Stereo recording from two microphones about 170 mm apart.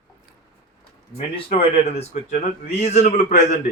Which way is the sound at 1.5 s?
35° left (ahead or behind).